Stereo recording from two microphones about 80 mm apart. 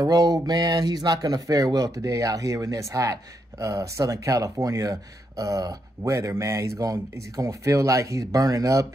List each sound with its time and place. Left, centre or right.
0.0 s speech: right